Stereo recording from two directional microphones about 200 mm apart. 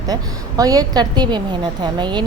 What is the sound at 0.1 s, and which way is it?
A woman's voice, 20° right (ahead or behind).